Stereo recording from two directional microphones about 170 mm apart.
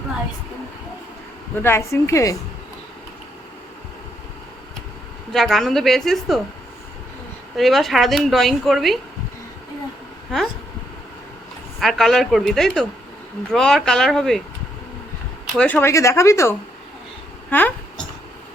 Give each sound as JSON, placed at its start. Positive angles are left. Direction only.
{"t": 1.5, "sound": "speech", "side_deg": 15}
{"t": 5.3, "sound": "speech", "side_deg": 0}
{"t": 7.5, "sound": "speech", "side_deg": 0}
{"t": 11.8, "sound": "speech", "side_deg": 0}
{"t": 15.5, "sound": "speech", "side_deg": 10}